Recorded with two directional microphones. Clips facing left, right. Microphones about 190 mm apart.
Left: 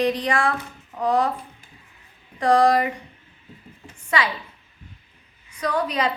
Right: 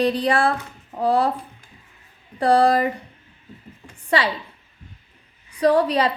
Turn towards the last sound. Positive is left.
turn(degrees=-35)  # may be behind; listen again after turning